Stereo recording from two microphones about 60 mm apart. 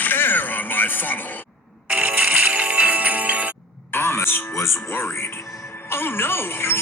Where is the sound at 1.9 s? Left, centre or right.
Right.